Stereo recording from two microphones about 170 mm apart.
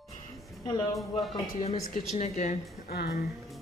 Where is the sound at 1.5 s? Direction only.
40° left (ahead or behind).